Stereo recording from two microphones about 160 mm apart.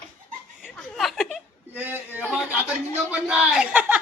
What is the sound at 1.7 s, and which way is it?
A man's voice, 10° right (ahead or behind).